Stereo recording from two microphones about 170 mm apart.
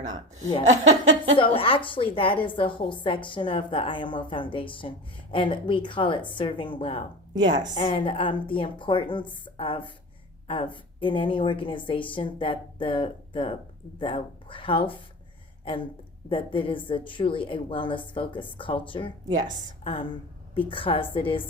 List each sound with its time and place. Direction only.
0.7 s laughter: 40° right (ahead or behind)
1.4 s a woman's voice: 30° left (ahead or behind)
16.3 s a woman's voice: 30° left (ahead or behind)